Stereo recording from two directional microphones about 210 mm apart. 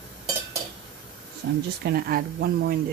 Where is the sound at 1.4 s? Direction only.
45° right (ahead or behind).